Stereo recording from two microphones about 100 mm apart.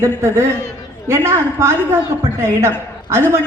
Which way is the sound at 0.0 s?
25° right (ahead or behind).